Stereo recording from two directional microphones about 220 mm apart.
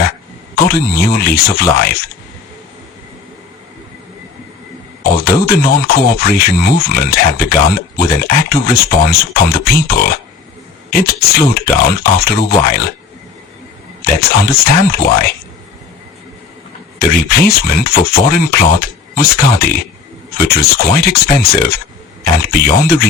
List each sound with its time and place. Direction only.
0.5 s speech: 45° left (ahead or behind)
5.0 s a sound: 45° left (ahead or behind)
5.4 s speech: 45° left (ahead or behind)
14.0 s speech: 45° left (ahead or behind)
17.0 s speech: 45° left (ahead or behind)